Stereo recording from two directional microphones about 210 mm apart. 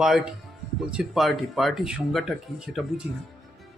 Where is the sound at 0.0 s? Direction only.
Centre (ahead or behind).